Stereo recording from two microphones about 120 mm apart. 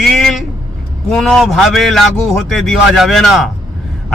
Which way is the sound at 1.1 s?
5° left (ahead or behind).